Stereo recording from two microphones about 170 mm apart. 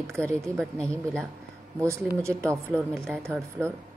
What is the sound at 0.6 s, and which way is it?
Speech, 5° left (ahead or behind).